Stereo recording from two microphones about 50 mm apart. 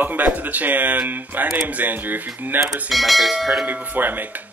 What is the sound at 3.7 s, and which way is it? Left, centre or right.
Speech, right.